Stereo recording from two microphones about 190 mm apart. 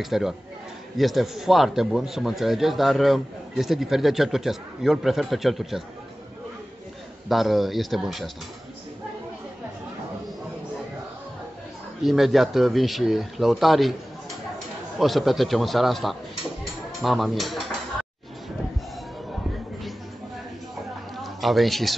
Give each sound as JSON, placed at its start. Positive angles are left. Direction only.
{"t": 0.0, "sound": "a man's voice", "side_deg": 0}
{"t": 7.2, "sound": "a man's voice", "side_deg": 0}
{"t": 12.0, "sound": "a man's voice", "side_deg": 0}
{"t": 15.0, "sound": "a man's voice", "side_deg": 0}
{"t": 21.2, "sound": "a man's voice", "side_deg": 0}